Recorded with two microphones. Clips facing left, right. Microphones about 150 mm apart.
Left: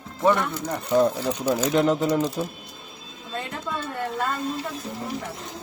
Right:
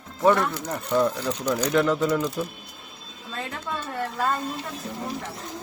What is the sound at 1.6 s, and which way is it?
Speech, 20° left (ahead or behind).